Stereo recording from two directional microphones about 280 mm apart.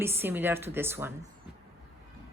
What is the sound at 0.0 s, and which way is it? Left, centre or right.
A woman's voice, centre.